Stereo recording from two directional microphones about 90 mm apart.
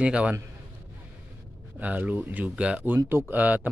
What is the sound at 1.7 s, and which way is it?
Speech, 15° right (ahead or behind).